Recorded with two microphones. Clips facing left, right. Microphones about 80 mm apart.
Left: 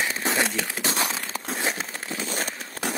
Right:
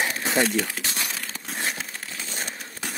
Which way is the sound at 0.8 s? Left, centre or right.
Left.